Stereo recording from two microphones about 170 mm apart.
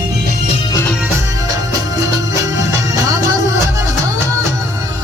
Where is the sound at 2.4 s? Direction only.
20° right (ahead or behind).